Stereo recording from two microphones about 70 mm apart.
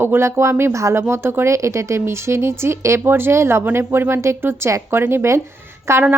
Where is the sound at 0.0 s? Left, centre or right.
Right.